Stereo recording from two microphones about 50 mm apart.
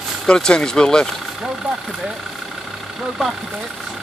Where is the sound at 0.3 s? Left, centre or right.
Centre.